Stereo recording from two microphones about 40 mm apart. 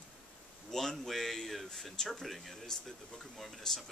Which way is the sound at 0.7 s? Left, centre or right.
Centre.